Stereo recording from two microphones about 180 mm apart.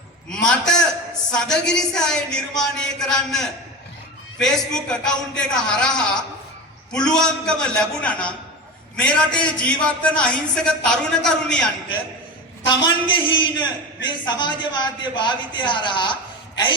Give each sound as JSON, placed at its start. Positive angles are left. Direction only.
{"t": 0.4, "sound": "a man's voice", "side_deg": 5}
{"t": 12.6, "sound": "a man's voice", "side_deg": 25}